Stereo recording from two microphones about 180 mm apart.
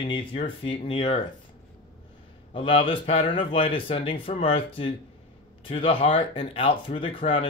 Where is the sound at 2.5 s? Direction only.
30° left (ahead or behind).